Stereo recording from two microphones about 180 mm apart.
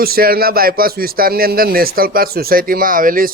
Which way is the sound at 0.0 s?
55° right (ahead or behind).